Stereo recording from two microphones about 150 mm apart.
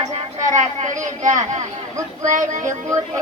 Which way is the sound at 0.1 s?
55° right (ahead or behind).